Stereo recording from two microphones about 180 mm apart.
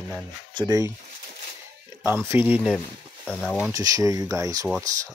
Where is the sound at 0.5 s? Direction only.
20° right (ahead or behind).